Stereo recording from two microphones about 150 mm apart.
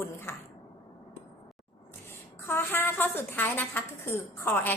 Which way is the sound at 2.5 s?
15° left (ahead or behind).